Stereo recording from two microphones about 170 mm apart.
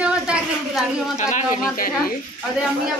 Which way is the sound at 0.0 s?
5° right (ahead or behind).